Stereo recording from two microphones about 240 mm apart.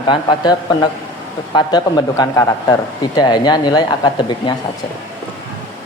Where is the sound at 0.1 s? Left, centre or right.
Centre.